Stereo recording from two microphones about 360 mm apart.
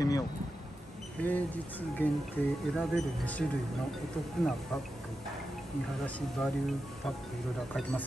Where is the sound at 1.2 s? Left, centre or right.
Centre.